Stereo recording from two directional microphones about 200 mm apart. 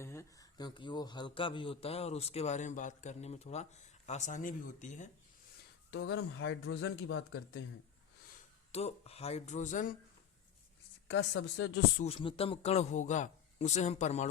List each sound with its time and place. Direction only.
0.0 s a man's voice: 15° left (ahead or behind); by 5.0 s 35° left (ahead or behind)
5.9 s speech: 75° left (ahead or behind)
8.7 s a man's voice: 30° left (ahead or behind)
11.2 s a woman's voice: 75° left (ahead or behind)
11.9 s a man's voice: 30° left (ahead or behind)